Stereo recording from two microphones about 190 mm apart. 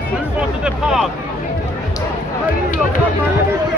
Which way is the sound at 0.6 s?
Centre (ahead or behind).